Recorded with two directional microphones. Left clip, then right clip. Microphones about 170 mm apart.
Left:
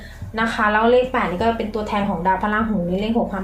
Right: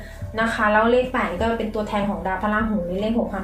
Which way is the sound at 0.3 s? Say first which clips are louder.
Even; 55° left (ahead or behind).